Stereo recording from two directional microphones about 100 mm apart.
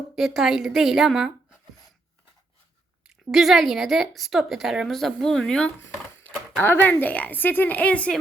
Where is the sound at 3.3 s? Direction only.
Centre (ahead or behind).